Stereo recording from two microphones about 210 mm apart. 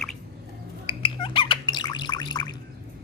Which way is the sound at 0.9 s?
25° left (ahead or behind).